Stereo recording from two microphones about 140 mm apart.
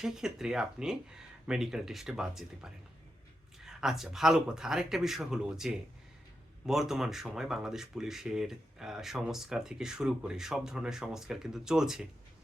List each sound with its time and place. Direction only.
0.0 s speech: 5° right (ahead or behind)
3.7 s speech: 5° right (ahead or behind)